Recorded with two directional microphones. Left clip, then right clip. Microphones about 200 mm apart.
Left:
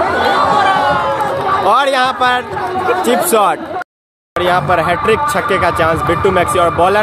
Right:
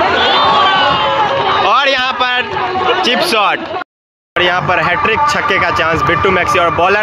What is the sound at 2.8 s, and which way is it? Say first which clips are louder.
Speech: right 1 dB; 50° left (ahead or behind).